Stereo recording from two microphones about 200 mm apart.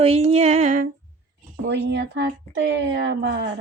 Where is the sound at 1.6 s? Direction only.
60° right (ahead or behind).